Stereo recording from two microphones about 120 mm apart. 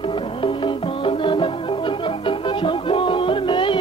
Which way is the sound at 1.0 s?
45° left (ahead or behind).